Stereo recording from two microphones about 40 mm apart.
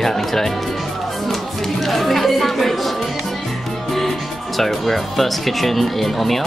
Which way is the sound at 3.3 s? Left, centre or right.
Centre.